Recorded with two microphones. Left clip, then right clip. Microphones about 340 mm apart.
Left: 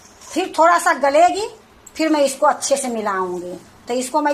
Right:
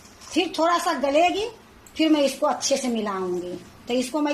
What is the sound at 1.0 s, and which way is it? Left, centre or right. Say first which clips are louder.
A woman's voice: left 6 dB; left.